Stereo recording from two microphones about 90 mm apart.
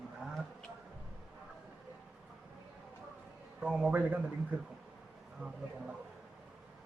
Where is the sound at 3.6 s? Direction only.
15° right (ahead or behind).